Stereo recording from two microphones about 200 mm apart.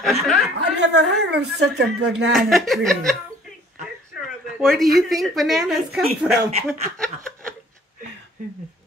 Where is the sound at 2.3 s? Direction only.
Centre (ahead or behind).